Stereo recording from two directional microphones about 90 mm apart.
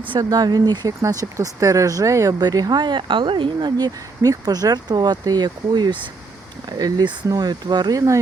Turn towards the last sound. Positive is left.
turn(degrees=-50)  # may be behind; listen again after turning